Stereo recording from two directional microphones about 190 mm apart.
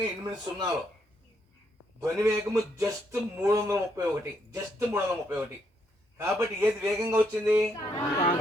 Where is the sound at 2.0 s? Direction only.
15° right (ahead or behind).